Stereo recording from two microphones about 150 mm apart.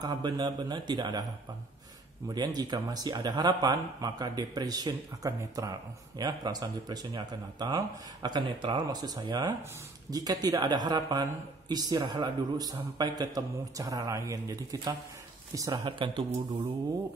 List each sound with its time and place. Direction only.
0.0 s speech: 30° right (ahead or behind)
2.2 s speech: 25° right (ahead or behind)